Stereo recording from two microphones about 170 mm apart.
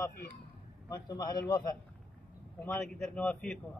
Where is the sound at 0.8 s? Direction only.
20° left (ahead or behind).